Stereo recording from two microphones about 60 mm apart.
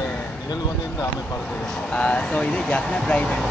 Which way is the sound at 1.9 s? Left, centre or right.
Centre.